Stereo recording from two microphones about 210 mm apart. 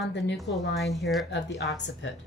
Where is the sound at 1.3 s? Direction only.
55° left (ahead or behind).